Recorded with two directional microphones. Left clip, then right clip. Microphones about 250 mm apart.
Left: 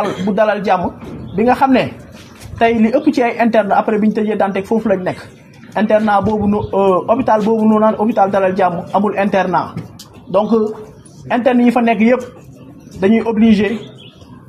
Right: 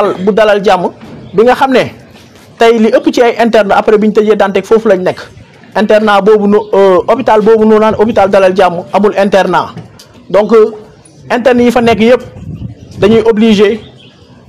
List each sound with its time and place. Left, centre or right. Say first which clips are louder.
0.3 s a man's voice: right 7 dB; right
11.2 s a man's voice: right 6 dB; right